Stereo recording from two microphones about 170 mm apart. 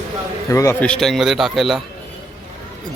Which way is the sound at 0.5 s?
15° left (ahead or behind).